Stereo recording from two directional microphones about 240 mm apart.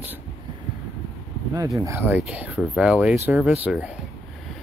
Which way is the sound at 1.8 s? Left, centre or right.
Centre.